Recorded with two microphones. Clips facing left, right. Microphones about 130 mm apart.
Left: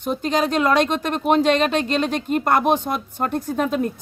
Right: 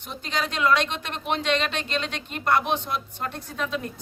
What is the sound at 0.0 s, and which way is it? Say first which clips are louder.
Speech: left 9 dB; 45° left (ahead or behind).